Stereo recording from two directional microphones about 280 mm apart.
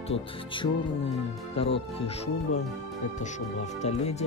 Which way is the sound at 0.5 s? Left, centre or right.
Centre.